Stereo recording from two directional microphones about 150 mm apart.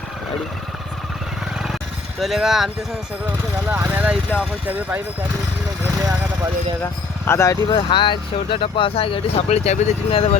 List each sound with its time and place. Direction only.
2.1 s speech: centre (ahead or behind)
3.7 s speech: 10° right (ahead or behind)
6.0 s vehicle: 20° right (ahead or behind)
6.8 s speech: 20° left (ahead or behind); by 10.3 s 40° left (ahead or behind)